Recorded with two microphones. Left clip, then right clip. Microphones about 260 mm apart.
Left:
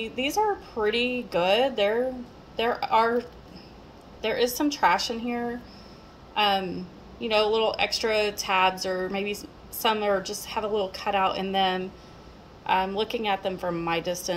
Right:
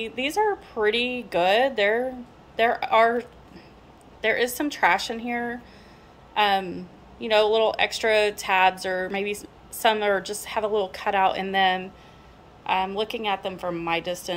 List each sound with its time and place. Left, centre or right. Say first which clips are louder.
0.0 s a woman's voice: right 1 dB; centre
4.2 s a woman's voice: right 2 dB; centre
6.3 s a woman's voice: right 2 dB; centre